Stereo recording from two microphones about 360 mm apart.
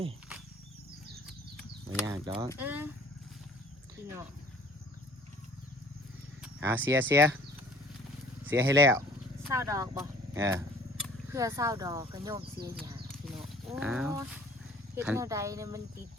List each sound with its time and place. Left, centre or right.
2.0 s speech: centre
6.4 s speech: centre
8.4 s speech: centre
12.8 s wild animals: centre
13.8 s speech: centre